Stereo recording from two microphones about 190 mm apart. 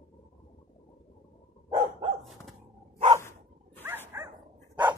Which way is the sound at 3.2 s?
15° left (ahead or behind).